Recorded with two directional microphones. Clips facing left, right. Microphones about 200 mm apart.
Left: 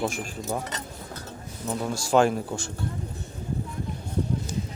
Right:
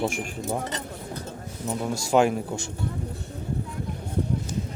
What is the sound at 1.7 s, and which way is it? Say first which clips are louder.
Speech: even; 10° right (ahead or behind).